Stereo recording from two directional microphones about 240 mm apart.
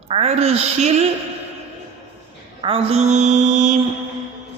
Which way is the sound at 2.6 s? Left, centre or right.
Right.